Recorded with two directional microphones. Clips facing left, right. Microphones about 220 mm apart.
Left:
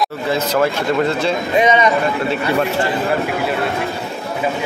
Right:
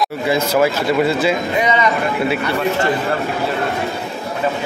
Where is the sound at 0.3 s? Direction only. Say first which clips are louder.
Right 2 dB; 10° right (ahead or behind).